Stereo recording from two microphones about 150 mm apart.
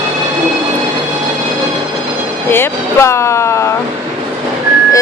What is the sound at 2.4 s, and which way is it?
Speech, 15° left (ahead or behind).